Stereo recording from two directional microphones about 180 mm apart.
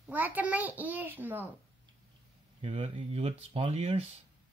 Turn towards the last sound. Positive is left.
turn(degrees=-35)  # may be behind; listen again after turning